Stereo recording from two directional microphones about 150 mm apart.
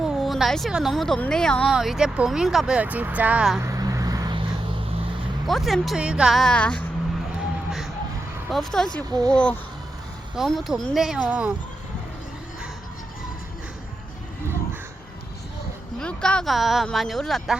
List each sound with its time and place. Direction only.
0.0 s a woman's voice: centre (ahead or behind)
3.6 s a sound: 20° right (ahead or behind)
5.5 s speech: centre (ahead or behind)
8.4 s speech: centre (ahead or behind)
16.0 s speech: 5° left (ahead or behind)